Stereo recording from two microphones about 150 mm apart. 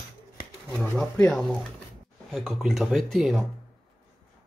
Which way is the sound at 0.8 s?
5° left (ahead or behind).